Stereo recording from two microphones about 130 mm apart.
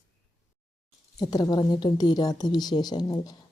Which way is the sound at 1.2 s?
30° left (ahead or behind).